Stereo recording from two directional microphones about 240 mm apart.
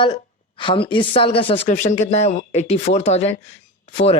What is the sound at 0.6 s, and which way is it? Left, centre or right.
Speech, centre.